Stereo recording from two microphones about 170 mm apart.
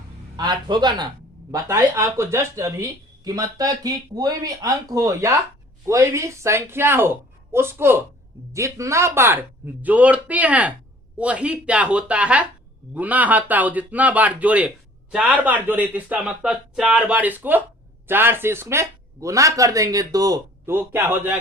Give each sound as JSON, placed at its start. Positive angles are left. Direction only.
{"t": 0.3, "sound": "a man's voice", "side_deg": -25}